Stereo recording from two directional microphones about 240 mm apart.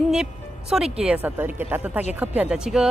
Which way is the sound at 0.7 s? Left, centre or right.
Centre.